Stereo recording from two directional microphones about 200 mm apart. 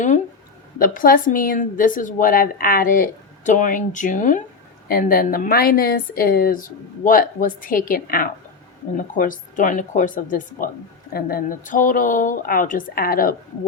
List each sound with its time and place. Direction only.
0.8 s a woman's voice: 45° left (ahead or behind)